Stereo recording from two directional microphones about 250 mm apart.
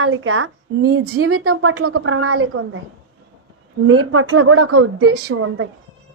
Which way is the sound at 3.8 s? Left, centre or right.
Right.